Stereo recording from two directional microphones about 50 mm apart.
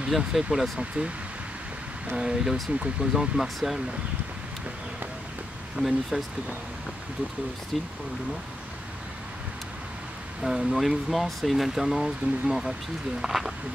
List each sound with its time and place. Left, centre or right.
0.3 s speech: centre
2.1 s speech: centre
5.8 s speech: centre
7.7 s speech: centre
10.4 s speech: centre